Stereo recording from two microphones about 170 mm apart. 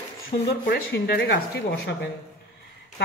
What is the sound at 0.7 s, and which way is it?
Speech, 70° left (ahead or behind).